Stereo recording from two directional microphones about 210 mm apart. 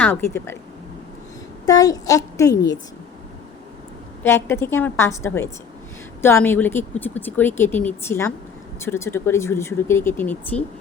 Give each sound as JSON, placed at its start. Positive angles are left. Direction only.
{"t": 0.0, "sound": "speech", "side_deg": 10}
{"t": 1.6, "sound": "speech", "side_deg": 15}
{"t": 4.2, "sound": "speech", "side_deg": 10}